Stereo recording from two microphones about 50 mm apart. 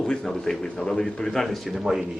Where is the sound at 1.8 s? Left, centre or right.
Centre.